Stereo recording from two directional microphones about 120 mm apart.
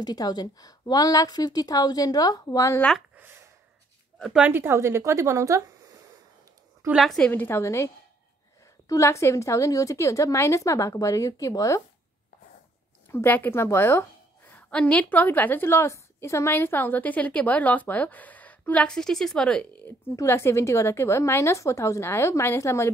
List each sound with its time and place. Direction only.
0.0 s a woman's voice: 35° left (ahead or behind)
3.2 s a sound: 20° right (ahead or behind)
4.2 s speech: 10° right (ahead or behind); by 5.9 s 25° right (ahead or behind)
6.9 s a woman's voice: centre (ahead or behind)
7.2 s a woman's voice: 15° left (ahead or behind)
13.1 s a woman's voice: 15° left (ahead or behind)
14.7 s a woman's voice: 10° left (ahead or behind)
20.2 s a woman's voice: 20° left (ahead or behind)